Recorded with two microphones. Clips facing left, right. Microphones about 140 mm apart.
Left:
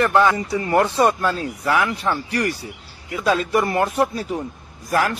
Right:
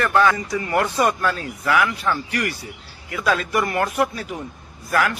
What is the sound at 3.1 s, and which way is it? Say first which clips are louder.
A man's voice: left 2 dB; 20° left (ahead or behind).